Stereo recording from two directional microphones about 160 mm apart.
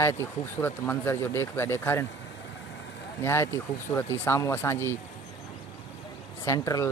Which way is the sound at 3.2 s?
15° left (ahead or behind).